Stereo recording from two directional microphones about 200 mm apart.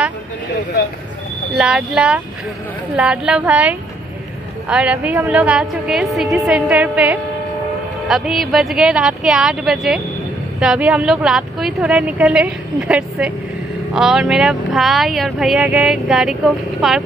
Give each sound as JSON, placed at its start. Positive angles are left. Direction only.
{"t": 1.5, "sound": "speech", "side_deg": -5}